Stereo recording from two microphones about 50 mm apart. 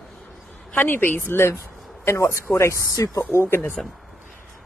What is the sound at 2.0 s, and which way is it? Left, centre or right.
Speech, left.